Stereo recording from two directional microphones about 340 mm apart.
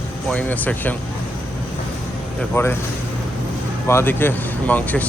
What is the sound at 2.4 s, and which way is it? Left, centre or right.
Speech, centre.